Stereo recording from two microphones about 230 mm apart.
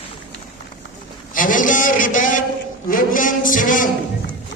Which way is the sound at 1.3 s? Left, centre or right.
Left.